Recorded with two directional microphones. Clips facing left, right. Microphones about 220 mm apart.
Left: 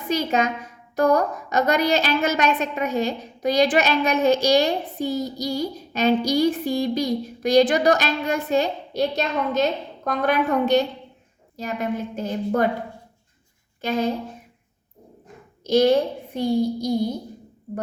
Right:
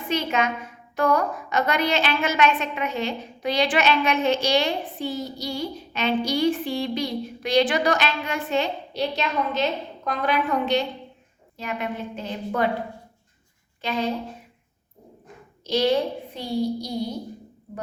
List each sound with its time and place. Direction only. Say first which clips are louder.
0.1 s a woman's voice: left 2 dB; 40° left (ahead or behind)
15.6 s a child's voice: left 4 dB; 45° left (ahead or behind)